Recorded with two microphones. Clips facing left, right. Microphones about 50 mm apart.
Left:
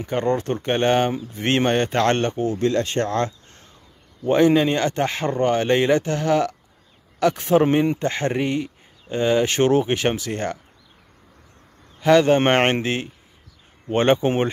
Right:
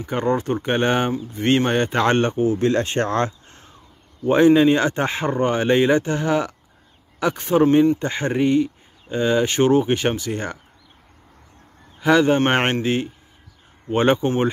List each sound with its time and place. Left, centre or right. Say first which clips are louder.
0.0 s speech: even; centre
2.7 s speech: right 1 dB; right
4.2 s speech: right 2 dB; centre
12.0 s speech: left 1 dB; centre